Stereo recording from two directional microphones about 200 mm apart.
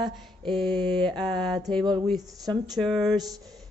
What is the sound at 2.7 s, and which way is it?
Mantra, centre (ahead or behind).